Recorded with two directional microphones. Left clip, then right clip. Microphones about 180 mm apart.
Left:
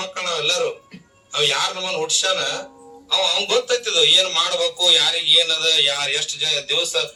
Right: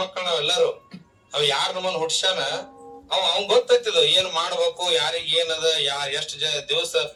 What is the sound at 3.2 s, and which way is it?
A man's voice, 40° right (ahead or behind).